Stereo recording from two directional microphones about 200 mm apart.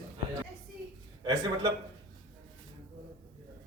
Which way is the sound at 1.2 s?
20° right (ahead or behind).